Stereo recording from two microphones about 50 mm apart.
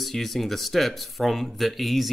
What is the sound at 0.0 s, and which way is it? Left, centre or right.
Speech, centre.